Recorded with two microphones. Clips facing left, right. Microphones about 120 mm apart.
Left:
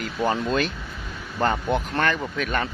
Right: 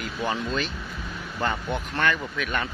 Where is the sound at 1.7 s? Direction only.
35° left (ahead or behind).